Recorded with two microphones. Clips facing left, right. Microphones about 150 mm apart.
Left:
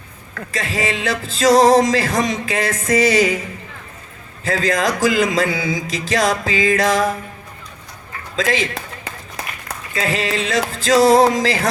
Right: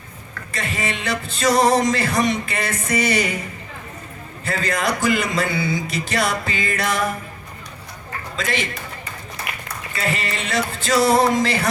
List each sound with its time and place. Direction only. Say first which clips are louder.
0.5 s speech: left 4 dB; 90° left
4.4 s speech: left 4 dB; 90° left
8.4 s speech: left 6 dB; 90° left
9.9 s speech: left 5 dB; 90° left